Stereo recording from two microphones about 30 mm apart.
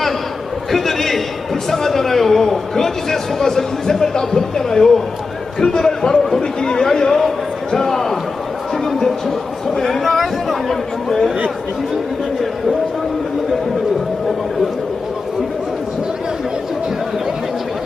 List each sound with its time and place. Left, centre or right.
0.7 s a sound: centre
1.7 s a man's voice: centre
10.0 s chatter: centre